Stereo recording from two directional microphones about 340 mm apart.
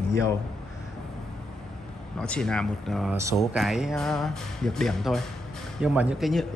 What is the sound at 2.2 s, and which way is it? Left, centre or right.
Speech, centre.